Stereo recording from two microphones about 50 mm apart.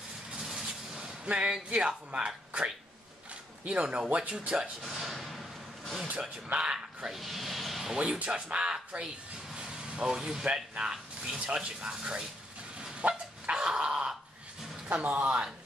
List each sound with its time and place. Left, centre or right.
0.3 s a sound: centre
1.3 s speech: right
4.8 s a sound: centre
6.5 s speech: right
7.1 s speech: centre
7.9 s speech: right
9.5 s vehicle: centre
10.4 s speech: right
13.0 s goose: right
13.5 s a sound: centre
14.9 s speech: right